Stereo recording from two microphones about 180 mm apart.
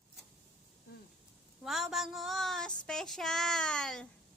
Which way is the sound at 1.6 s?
Centre (ahead or behind).